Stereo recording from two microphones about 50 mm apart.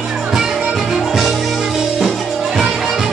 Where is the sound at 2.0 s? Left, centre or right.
Centre.